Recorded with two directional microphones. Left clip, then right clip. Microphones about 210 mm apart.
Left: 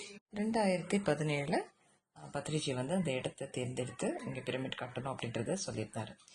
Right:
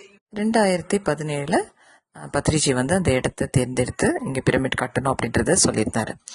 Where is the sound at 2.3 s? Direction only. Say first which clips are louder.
Right 16 dB; 40° right (ahead or behind).